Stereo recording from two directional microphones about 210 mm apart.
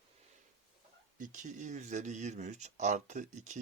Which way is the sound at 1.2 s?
35° right (ahead or behind).